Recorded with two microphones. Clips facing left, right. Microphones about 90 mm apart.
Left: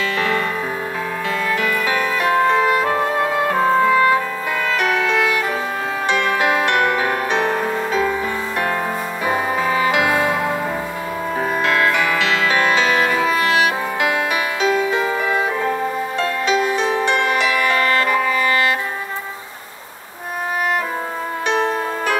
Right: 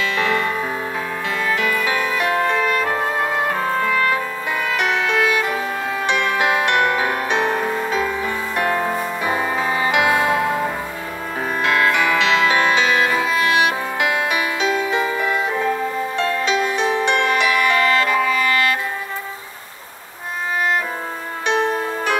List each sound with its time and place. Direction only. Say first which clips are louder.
0.2 s music: right 1 dB; 20° right (ahead or behind)
1.5 s music: right 1 dB; 20° right (ahead or behind)
2.2 s music: left 5 dB; 20° left (ahead or behind)
4.7 s music: left 1 dB; 20° right (ahead or behind)
9.8 s music: right 1 dB; 20° right (ahead or behind)
11.6 s music: right 2 dB; 20° right (ahead or behind)
15.0 s music: left 1 dB; 25° left (ahead or behind)
16.4 s music: left 4 dB; 20° left (ahead or behind)
21.5 s music: right 1 dB; 20° right (ahead or behind)